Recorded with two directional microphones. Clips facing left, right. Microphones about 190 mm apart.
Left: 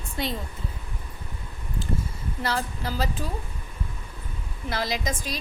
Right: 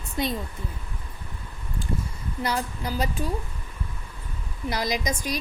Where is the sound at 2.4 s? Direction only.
15° right (ahead or behind).